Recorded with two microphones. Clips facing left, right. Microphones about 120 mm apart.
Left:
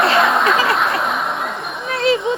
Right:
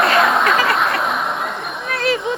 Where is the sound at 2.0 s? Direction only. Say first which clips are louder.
Left 3 dB; 25° left (ahead or behind).